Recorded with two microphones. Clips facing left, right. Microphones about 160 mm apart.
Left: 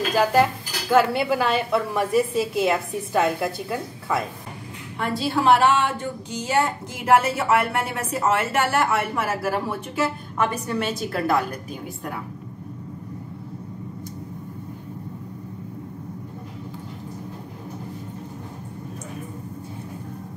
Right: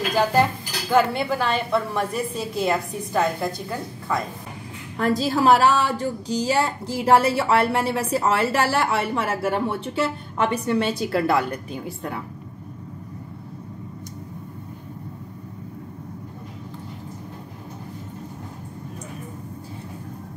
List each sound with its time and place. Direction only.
0.1 s speech: 5° left (ahead or behind)
4.9 s a woman's voice: 40° right (ahead or behind)